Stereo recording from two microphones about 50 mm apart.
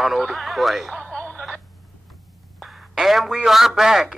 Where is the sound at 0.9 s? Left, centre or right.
Left.